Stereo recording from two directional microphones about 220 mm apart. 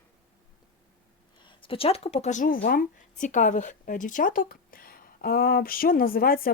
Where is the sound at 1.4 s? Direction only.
20° left (ahead or behind).